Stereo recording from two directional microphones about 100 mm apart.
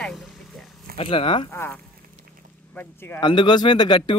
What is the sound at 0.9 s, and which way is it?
Speech, 65° left (ahead or behind).